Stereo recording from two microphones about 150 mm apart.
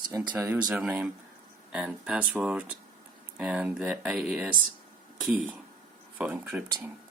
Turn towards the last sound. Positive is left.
turn(degrees=-10)  # may be behind; listen again after turning